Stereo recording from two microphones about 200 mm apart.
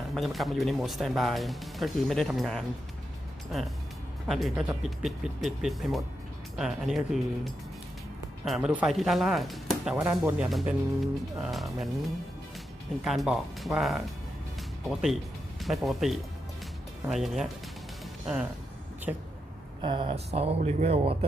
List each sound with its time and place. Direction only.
0.1 s speech: centre (ahead or behind)
4.3 s speech: centre (ahead or behind)
13.1 s speech: centre (ahead or behind)
19.1 s speech: 10° right (ahead or behind)
19.8 s speech: 25° right (ahead or behind)